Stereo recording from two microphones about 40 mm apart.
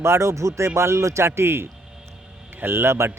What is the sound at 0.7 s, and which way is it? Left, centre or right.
Speech, right.